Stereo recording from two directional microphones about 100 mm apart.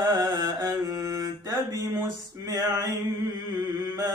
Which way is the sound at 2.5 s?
35° right (ahead or behind).